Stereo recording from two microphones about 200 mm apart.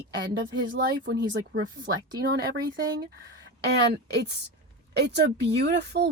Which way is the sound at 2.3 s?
60° right (ahead or behind).